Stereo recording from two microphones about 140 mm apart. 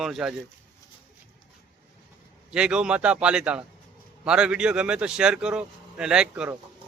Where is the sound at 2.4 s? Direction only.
5° right (ahead or behind).